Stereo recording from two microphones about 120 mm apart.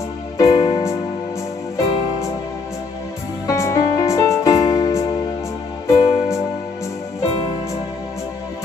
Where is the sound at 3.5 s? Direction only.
25° left (ahead or behind).